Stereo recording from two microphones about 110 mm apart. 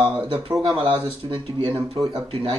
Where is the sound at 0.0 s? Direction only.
10° right (ahead or behind).